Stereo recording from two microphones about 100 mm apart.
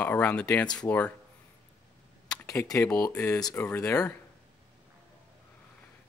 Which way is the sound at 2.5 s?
30° left (ahead or behind).